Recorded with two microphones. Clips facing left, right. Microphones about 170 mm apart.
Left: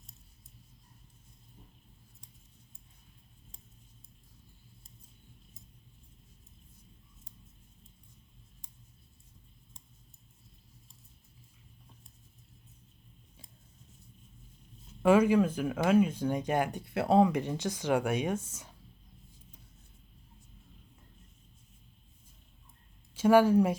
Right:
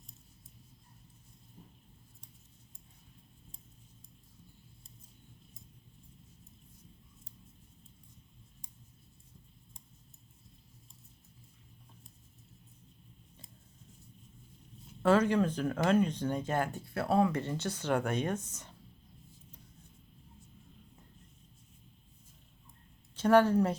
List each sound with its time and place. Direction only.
15.0 s speech: 10° left (ahead or behind)
23.1 s speech: 10° left (ahead or behind)